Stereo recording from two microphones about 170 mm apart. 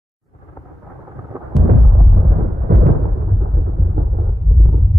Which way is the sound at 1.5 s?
Centre (ahead or behind).